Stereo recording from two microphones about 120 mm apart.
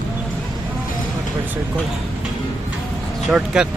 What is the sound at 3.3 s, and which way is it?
Speech, 5° right (ahead or behind).